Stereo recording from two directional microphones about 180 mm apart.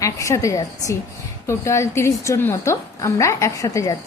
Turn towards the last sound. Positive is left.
turn(degrees=20)  # may be behind; listen again after turning